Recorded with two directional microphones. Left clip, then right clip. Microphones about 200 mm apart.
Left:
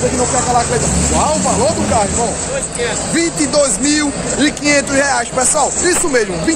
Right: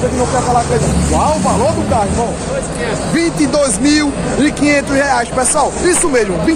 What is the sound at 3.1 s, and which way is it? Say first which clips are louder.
Speech: right 1 dB; centre (ahead or behind).